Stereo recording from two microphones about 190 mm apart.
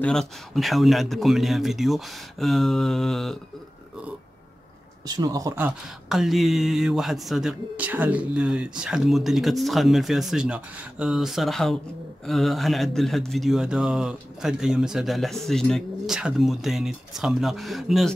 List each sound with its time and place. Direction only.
0.0 s a man's voice: 5° left (ahead or behind)
5.0 s speech: 20° right (ahead or behind)
6.0 s a man's voice: centre (ahead or behind)